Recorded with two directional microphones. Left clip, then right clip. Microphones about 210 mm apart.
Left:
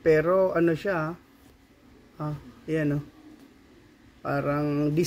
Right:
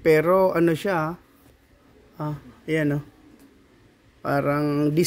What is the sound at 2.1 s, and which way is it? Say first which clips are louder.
Speech: right 3 dB; 45° right (ahead or behind).